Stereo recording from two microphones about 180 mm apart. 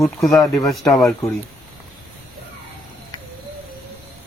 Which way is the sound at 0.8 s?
20° left (ahead or behind).